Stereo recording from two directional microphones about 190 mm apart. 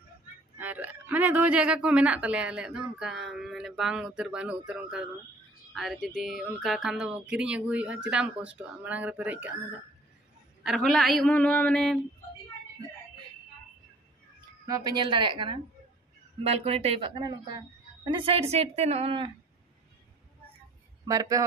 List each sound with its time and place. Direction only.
0.6 s a man's voice: 10° right (ahead or behind)
10.6 s a man's voice: centre (ahead or behind)
14.7 s a woman's voice: 20° right (ahead or behind)
21.1 s speech: 20° right (ahead or behind)